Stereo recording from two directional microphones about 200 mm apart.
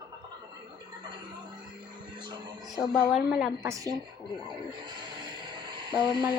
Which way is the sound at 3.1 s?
Centre (ahead or behind).